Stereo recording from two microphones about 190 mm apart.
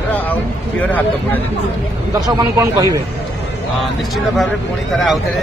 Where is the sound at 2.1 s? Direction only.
15° right (ahead or behind).